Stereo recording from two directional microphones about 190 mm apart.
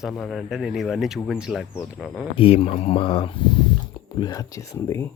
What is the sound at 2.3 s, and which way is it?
Speech, 30° left (ahead or behind).